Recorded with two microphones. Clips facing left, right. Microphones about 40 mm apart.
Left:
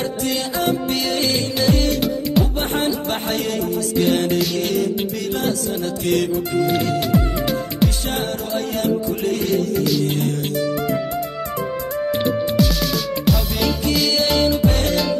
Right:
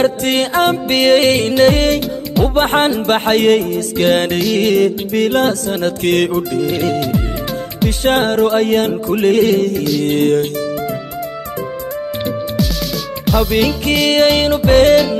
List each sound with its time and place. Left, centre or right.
0.0 s music: right
12.5 s music: centre
14.0 s music: right